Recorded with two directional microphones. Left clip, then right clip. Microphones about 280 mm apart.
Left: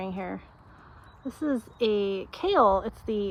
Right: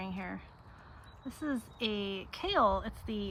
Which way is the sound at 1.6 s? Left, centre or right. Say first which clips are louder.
Left 10 dB; centre.